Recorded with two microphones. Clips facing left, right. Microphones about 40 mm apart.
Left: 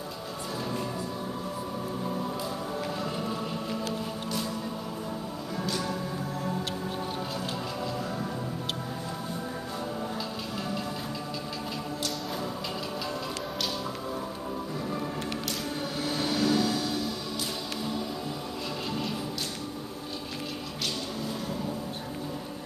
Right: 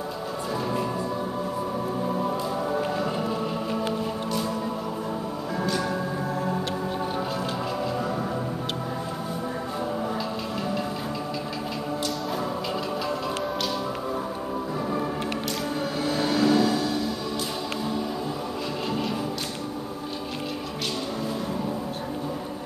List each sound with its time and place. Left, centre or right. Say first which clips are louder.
3.0 s music: right 5 dB; centre
16.0 s music: right 5 dB; centre